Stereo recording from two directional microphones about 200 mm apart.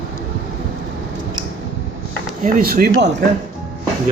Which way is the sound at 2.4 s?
45° right (ahead or behind).